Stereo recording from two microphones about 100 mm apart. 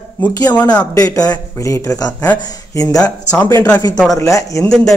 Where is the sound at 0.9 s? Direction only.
35° left (ahead or behind).